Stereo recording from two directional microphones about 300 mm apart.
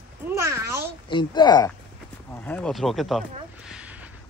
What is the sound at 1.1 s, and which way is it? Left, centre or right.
Speech, centre.